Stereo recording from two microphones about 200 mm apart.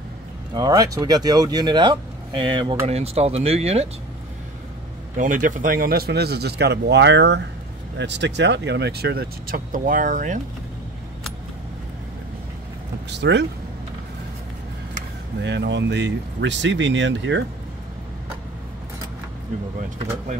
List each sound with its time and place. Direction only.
0.6 s speech: 20° right (ahead or behind)
5.1 s speech: 40° right (ahead or behind)
13.1 s speech: 60° right (ahead or behind)
15.4 s speech: 60° right (ahead or behind)